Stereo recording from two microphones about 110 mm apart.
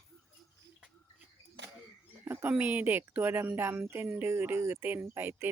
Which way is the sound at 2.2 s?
20° right (ahead or behind).